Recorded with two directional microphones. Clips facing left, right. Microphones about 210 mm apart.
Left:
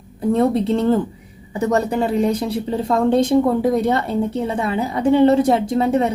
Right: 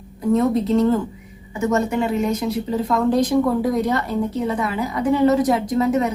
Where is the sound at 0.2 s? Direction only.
30° left (ahead or behind).